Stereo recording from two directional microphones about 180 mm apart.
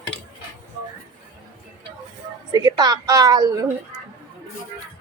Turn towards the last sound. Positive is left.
turn(degrees=-20)  # may be behind; listen again after turning